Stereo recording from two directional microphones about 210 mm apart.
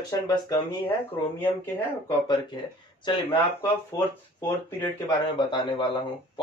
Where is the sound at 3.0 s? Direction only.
20° left (ahead or behind).